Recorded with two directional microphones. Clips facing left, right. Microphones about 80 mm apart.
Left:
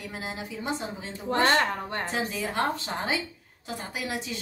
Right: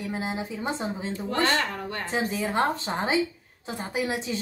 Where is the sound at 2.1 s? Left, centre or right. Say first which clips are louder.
Right 7 dB; right.